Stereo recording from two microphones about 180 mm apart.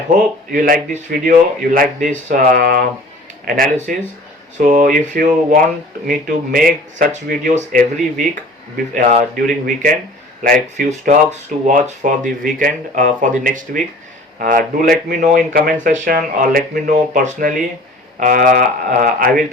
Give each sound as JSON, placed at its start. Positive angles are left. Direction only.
{"t": 0.5, "sound": "speech", "side_deg": -50}